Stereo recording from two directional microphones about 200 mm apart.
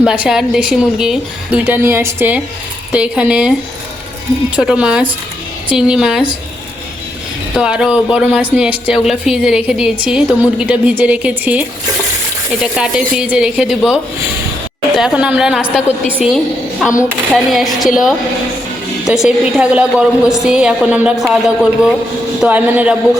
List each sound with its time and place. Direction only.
0.0 s speech: 5° right (ahead or behind)
4.5 s speech: 5° right (ahead or behind)
7.5 s speech: 5° right (ahead or behind)
12.7 s speech: 5° right (ahead or behind)
16.9 s speech: 15° left (ahead or behind)
17.3 s a man's voice: centre (ahead or behind)